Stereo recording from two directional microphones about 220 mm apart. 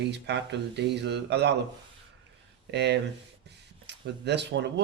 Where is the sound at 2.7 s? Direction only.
50° right (ahead or behind).